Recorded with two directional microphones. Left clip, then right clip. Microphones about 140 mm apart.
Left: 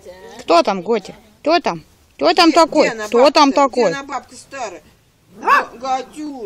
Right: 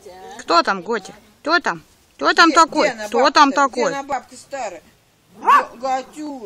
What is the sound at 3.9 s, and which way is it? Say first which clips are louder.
Speech: right 1 dB; 25° right (ahead or behind).